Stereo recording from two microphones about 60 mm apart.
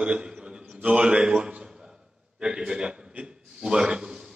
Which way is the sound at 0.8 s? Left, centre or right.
Centre.